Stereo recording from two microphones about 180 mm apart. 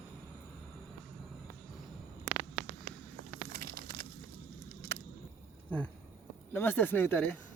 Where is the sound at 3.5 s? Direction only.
60° right (ahead or behind).